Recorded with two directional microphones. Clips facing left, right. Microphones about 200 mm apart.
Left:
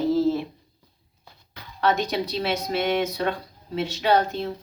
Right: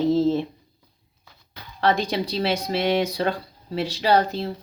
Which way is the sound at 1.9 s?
30° right (ahead or behind).